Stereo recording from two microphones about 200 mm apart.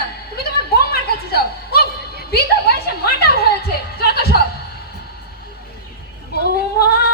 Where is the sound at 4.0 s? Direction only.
50° left (ahead or behind).